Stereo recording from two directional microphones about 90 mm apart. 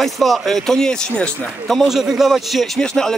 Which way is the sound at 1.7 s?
Centre (ahead or behind).